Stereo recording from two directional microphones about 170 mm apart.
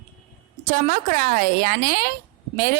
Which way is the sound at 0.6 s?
55° right (ahead or behind).